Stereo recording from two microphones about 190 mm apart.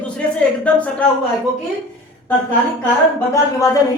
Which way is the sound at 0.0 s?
5° left (ahead or behind).